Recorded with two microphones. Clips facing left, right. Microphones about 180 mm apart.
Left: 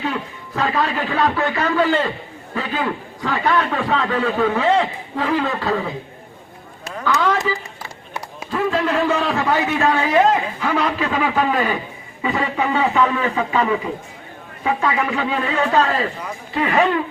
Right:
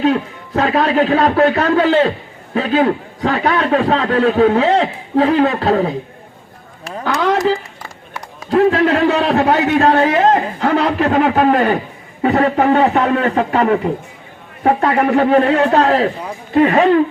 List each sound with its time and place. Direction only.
0.0 s a man's voice: 70° right (ahead or behind)
7.3 s a man's voice: 75° right (ahead or behind); by 16.0 s 60° right (ahead or behind)
16.6 s speech: 45° right (ahead or behind)